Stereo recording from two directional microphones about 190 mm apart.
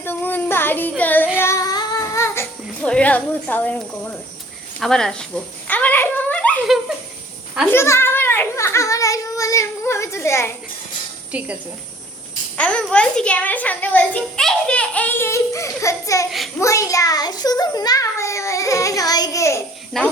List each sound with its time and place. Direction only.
0.0 s child singing: 10° left (ahead or behind)
1.4 s music: 15° left (ahead or behind)
4.8 s speech: 5° left (ahead or behind)
5.6 s a sound: 10° left (ahead or behind)
7.7 s a child's voice: 15° left (ahead or behind)
11.3 s speech: 5° right (ahead or behind)
12.5 s a sound: 5° left (ahead or behind)
12.9 s a child's voice: 5° left (ahead or behind)